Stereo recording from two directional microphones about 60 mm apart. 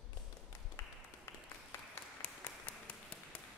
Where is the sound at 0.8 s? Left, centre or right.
Left.